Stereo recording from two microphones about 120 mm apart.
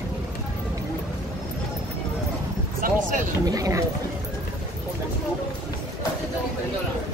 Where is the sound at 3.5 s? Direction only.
25° right (ahead or behind).